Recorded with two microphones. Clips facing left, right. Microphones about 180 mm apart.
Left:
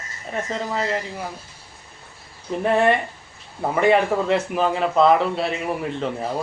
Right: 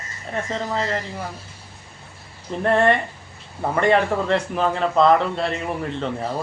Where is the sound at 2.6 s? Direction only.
5° left (ahead or behind).